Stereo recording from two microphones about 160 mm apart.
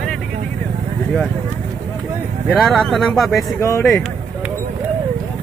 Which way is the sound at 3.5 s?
15° left (ahead or behind).